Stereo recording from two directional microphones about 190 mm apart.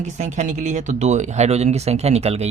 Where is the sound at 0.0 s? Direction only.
40° right (ahead or behind).